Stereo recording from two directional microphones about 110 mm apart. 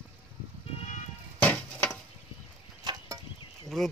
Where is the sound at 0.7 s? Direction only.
90° left.